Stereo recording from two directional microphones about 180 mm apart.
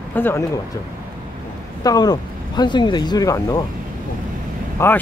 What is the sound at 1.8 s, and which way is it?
Speech, 20° left (ahead or behind).